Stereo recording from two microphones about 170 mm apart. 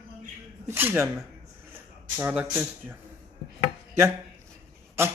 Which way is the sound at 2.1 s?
10° right (ahead or behind).